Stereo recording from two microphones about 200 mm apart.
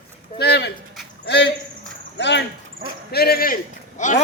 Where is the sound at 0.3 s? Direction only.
55° left (ahead or behind).